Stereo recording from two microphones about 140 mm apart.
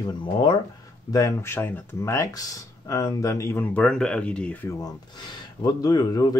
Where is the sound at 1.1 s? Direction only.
20° left (ahead or behind).